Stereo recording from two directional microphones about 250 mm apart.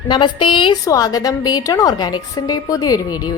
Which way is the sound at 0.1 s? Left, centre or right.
Centre.